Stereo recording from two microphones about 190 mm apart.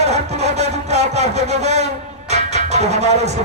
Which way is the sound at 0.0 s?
35° right (ahead or behind).